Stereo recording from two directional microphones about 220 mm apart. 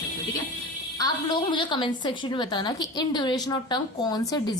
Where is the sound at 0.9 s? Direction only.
20° left (ahead or behind).